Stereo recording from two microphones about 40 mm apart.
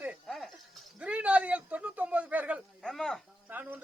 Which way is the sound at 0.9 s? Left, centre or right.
Right.